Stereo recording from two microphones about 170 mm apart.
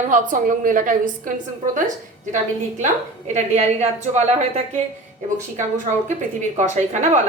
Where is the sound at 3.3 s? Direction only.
40° right (ahead or behind).